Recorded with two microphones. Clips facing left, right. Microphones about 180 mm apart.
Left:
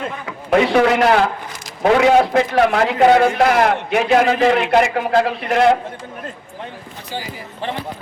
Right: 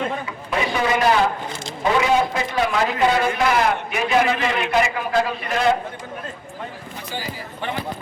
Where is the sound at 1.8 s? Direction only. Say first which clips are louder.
Left 6 dB; 65° left (ahead or behind).